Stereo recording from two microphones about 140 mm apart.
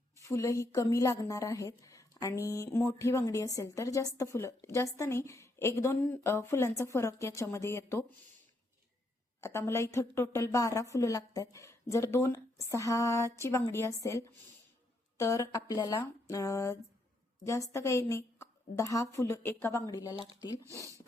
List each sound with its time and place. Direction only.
0.2 s a woman's voice: 20° left (ahead or behind)
9.4 s a woman's voice: 20° left (ahead or behind)
19.9 s a woman's voice: 25° left (ahead or behind)
20.7 s speech: 20° right (ahead or behind)